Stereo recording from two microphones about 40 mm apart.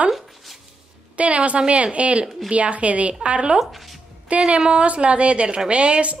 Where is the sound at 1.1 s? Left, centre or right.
Right.